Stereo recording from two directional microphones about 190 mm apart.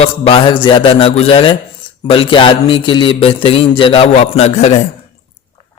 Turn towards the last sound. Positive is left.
turn(degrees=35)  # may be behind; listen again after turning